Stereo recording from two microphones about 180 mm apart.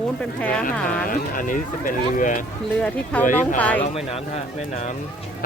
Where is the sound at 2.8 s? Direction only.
10° left (ahead or behind).